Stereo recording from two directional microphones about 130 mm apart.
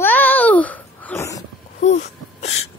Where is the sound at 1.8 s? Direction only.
60° left (ahead or behind).